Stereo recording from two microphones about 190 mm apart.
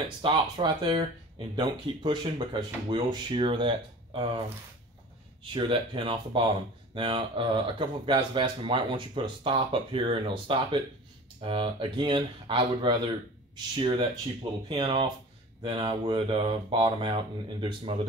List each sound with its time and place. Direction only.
0.2 s speech: 25° right (ahead or behind)
5.4 s speech: 25° right (ahead or behind)